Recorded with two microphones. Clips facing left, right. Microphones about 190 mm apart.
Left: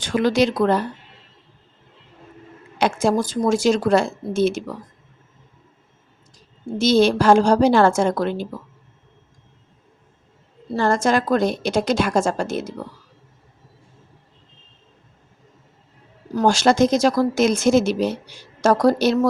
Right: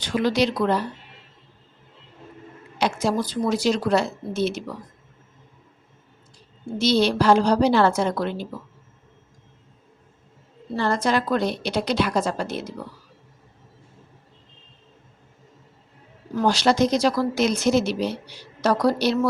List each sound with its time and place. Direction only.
0.0 s a woman's voice: 50° left (ahead or behind)
2.7 s a woman's voice: 50° left (ahead or behind)
6.7 s a woman's voice: 45° left (ahead or behind)
10.8 s a woman's voice: 45° left (ahead or behind)
16.3 s a woman's voice: 45° left (ahead or behind)